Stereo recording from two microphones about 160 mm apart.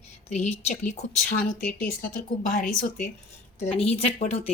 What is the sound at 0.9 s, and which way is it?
Speech, 55° left (ahead or behind).